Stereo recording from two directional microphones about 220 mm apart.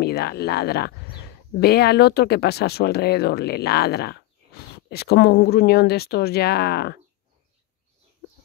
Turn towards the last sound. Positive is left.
turn(degrees=45)  # may be behind; listen again after turning